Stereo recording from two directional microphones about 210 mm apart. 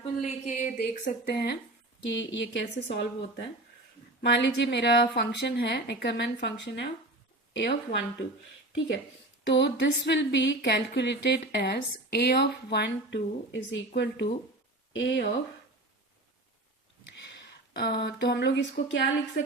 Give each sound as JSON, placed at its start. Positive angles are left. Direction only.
{"t": 0.0, "sound": "a woman's voice", "side_deg": 30}
{"t": 4.2, "sound": "speech", "side_deg": 55}
{"t": 9.5, "sound": "speech", "side_deg": 55}
{"t": 17.7, "sound": "speech", "side_deg": 50}